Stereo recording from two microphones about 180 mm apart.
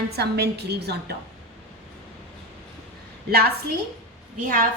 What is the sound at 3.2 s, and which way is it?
Speech, 60° right (ahead or behind).